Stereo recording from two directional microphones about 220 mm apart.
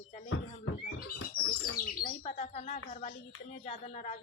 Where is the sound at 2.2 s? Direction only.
30° left (ahead or behind).